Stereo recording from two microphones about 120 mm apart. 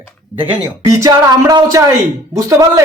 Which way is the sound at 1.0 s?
30° right (ahead or behind).